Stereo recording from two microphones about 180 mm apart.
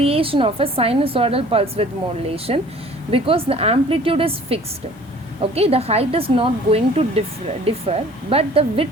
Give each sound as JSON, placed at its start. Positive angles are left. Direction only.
{"t": 0.0, "sound": "a woman's voice", "side_deg": -30}